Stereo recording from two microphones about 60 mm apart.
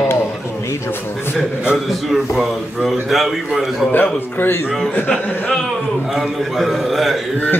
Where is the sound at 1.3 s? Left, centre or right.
Centre.